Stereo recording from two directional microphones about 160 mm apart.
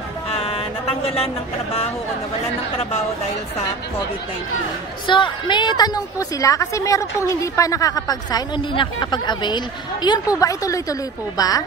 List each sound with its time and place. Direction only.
0.3 s a sound: 35° left (ahead or behind)
2.8 s speech: 45° left (ahead or behind)
5.0 s a woman's voice: 30° left (ahead or behind)